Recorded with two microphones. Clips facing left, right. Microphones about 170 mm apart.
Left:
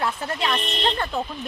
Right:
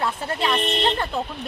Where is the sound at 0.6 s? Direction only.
60° right (ahead or behind).